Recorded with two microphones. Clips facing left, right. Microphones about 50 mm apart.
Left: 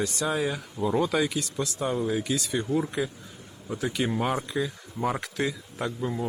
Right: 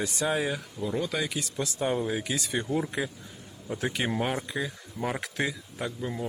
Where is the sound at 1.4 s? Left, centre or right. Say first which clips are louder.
Left 1 dB; right.